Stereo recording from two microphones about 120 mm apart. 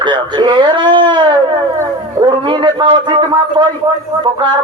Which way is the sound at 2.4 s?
40° right (ahead or behind).